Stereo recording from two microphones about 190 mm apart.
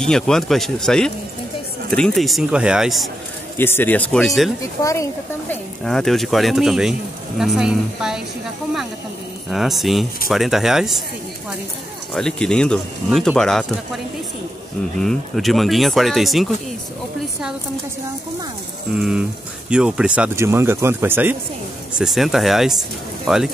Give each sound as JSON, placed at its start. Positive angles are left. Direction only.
{"t": 0.0, "sound": "speech", "side_deg": 5}
{"t": 3.5, "sound": "speech", "side_deg": 10}
{"t": 4.6, "sound": "speech", "side_deg": 15}
{"t": 5.5, "sound": "speech", "side_deg": 5}
{"t": 9.5, "sound": "speech", "side_deg": 0}
{"t": 12.1, "sound": "speech", "side_deg": 5}
{"t": 18.9, "sound": "speech", "side_deg": -5}